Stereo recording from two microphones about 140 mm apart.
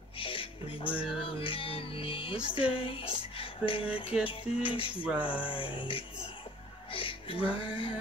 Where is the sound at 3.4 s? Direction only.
40° left (ahead or behind).